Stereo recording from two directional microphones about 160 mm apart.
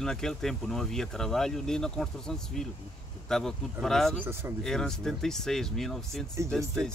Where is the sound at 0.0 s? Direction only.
5° left (ahead or behind).